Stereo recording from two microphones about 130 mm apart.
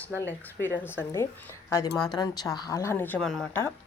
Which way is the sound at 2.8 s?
20° left (ahead or behind).